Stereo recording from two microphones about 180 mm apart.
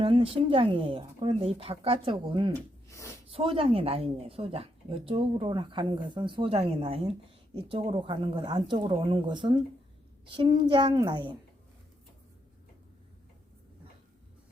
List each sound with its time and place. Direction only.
0.0 s speech: 30° right (ahead or behind)
2.9 s gasp: 15° left (ahead or behind)
3.2 s speech: 30° right (ahead or behind)